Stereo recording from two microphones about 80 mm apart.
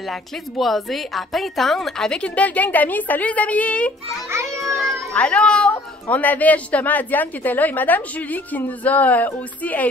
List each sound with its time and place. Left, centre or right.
0.1 s a woman's voice: centre
5.1 s speech: centre